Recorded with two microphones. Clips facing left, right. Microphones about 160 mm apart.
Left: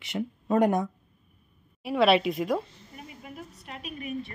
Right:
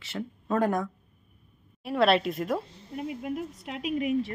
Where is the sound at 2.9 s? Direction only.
75° right (ahead or behind); by 4.3 s 90° right.